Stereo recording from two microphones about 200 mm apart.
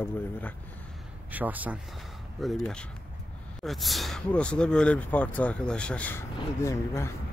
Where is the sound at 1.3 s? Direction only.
10° right (ahead or behind).